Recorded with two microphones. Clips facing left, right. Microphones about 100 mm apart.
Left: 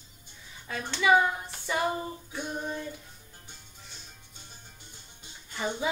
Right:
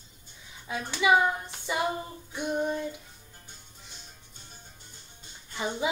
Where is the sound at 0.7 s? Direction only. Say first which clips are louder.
Even; 15° right (ahead or behind).